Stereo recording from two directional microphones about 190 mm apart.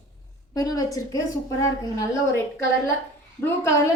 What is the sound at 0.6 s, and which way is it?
Speech, 20° left (ahead or behind).